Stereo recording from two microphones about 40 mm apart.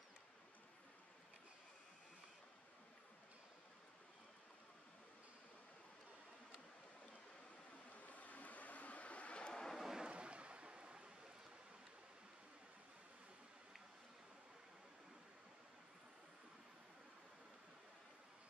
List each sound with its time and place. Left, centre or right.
7.9 s vehicle: left
9.5 s vehicle: centre
9.9 s a sound: right